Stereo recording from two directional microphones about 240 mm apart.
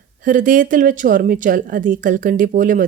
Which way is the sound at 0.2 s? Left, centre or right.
Right.